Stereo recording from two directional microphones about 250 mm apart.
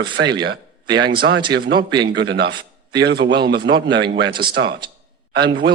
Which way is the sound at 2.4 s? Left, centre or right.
Centre.